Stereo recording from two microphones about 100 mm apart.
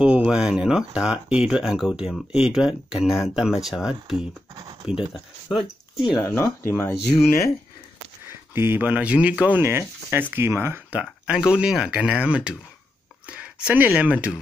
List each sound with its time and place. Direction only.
0.0 s speech: 10° right (ahead or behind)
5.5 s speech: 5° right (ahead or behind)
6.1 s speech: 30° left (ahead or behind)
8.5 s speech: 20° right (ahead or behind)
9.6 s speech: 25° right (ahead or behind)
10.9 s speech: 10° right (ahead or behind)